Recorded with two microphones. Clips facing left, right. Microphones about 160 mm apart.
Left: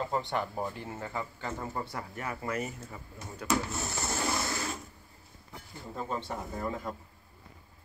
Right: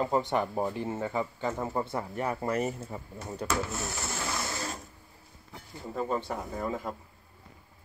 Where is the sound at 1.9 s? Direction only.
30° right (ahead or behind).